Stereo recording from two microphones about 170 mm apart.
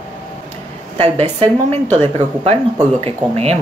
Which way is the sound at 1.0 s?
35° right (ahead or behind).